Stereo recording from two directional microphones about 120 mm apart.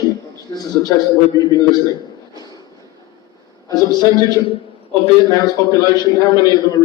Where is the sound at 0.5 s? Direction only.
35° left (ahead or behind).